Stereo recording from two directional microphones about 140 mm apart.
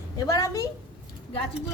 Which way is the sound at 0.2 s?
25° left (ahead or behind).